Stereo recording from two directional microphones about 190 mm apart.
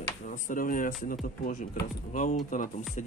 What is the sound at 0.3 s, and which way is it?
Speech, 45° left (ahead or behind).